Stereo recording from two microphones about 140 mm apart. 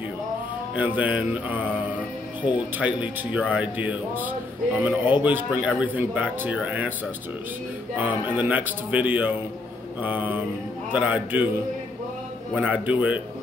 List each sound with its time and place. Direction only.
0.7 s speech: 10° right (ahead or behind)
2.8 s speech: 10° right (ahead or behind)
8.0 s speech: 10° right (ahead or behind)
12.5 s speech: 10° right (ahead or behind)